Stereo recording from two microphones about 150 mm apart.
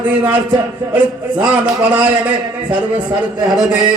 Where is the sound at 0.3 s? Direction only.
30° right (ahead or behind).